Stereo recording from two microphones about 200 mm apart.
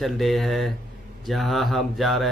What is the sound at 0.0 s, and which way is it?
Speech, centre (ahead or behind).